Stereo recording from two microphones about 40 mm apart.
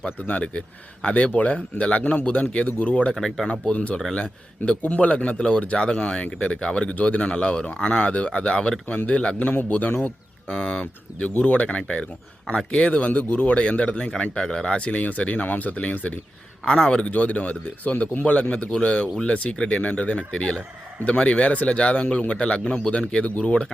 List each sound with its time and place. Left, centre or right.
0.3 s speech: left
3.1 s speech: centre
3.4 s speech: left
10.5 s speech: left
16.6 s speech: centre
17.0 s speech: left
22.6 s speech: centre
22.9 s speech: left